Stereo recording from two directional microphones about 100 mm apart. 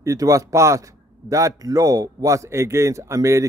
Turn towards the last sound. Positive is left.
turn(degrees=-30)  # may be behind; listen again after turning